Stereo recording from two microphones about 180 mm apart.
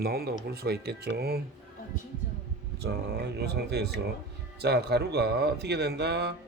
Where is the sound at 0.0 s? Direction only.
60° right (ahead or behind).